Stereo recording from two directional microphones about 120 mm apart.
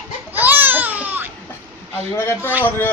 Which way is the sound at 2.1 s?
20° left (ahead or behind).